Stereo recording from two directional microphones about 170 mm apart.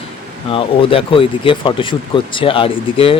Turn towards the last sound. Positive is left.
turn(degrees=35)  # may be behind; listen again after turning